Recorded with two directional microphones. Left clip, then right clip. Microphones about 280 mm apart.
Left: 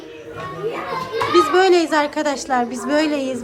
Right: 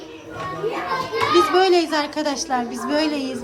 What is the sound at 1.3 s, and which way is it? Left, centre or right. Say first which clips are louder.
A woman's voice: left 2 dB; centre.